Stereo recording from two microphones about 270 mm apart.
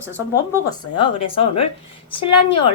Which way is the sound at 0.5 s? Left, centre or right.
Centre.